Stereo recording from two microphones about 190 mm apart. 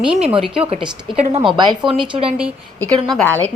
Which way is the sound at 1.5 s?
25° right (ahead or behind).